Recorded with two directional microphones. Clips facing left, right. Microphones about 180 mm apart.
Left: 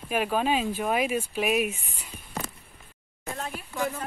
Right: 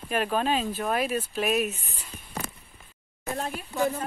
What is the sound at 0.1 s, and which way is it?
Speech, 10° left (ahead or behind).